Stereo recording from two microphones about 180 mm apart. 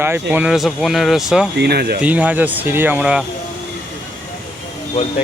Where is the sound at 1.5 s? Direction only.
65° right (ahead or behind).